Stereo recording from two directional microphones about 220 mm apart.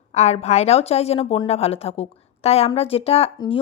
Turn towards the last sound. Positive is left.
turn(degrees=25)  # may be behind; listen again after turning